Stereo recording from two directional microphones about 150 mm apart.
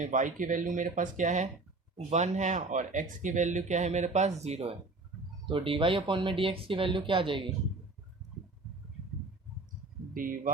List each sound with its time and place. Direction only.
0.0 s speech: 60° right (ahead or behind)
5.5 s speech: 35° right (ahead or behind)
10.2 s speech: 65° right (ahead or behind)